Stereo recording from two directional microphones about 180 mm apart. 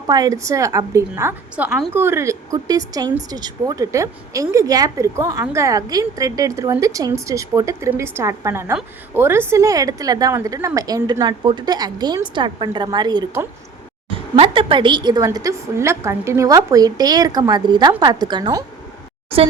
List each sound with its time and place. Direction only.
0.1 s a woman's voice: 20° right (ahead or behind)